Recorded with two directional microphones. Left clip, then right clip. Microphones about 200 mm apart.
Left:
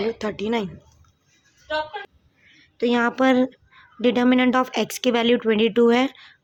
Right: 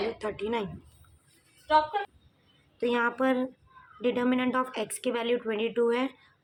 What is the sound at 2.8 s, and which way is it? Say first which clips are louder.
A woman's voice: left 7 dB; 35° left (ahead or behind).